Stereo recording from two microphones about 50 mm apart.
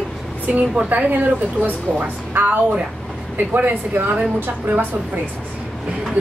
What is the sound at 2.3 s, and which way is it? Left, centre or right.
A woman's voice, right.